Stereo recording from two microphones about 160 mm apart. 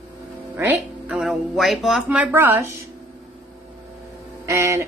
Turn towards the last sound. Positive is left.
turn(degrees=-15)  # may be behind; listen again after turning